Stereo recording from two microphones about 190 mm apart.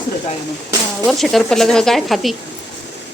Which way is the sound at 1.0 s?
Centre (ahead or behind).